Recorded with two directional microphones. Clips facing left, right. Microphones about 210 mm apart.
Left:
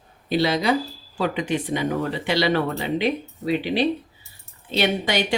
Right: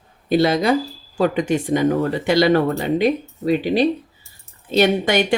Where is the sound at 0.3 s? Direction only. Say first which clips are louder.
Right 4 dB; 50° right (ahead or behind).